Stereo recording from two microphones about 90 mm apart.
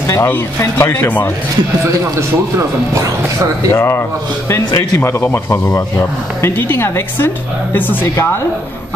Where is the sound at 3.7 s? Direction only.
30° left (ahead or behind).